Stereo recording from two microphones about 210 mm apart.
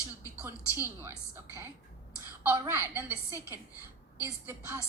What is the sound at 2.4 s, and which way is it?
Speech, 15° right (ahead or behind).